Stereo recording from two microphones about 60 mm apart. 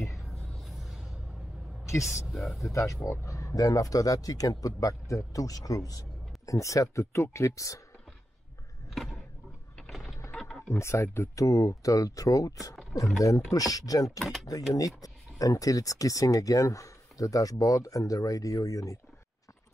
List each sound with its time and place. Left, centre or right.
0.7 s music: centre
1.9 s speech: left
2.3 s speech: centre
2.7 s speech: left
8.9 s a sound: centre
10.7 s speech: left
11.3 s speech: left
14.2 s speech: centre
15.0 s speech: left